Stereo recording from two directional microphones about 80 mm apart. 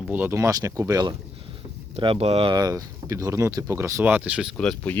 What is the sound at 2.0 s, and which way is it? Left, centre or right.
Speech, right.